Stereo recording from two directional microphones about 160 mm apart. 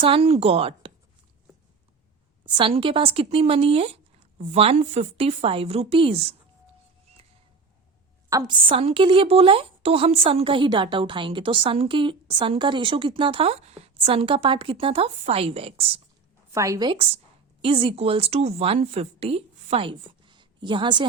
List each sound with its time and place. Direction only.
0.0 s a woman's voice: 40° right (ahead or behind)
2.6 s a woman's voice: 35° right (ahead or behind)
8.3 s a woman's voice: 20° right (ahead or behind)
8.7 s a woman's voice: 35° right (ahead or behind)
16.5 s speech: 20° right (ahead or behind)
17.6 s a woman's voice: 35° right (ahead or behind)